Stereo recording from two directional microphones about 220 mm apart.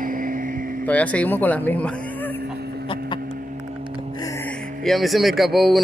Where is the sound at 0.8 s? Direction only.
5° left (ahead or behind).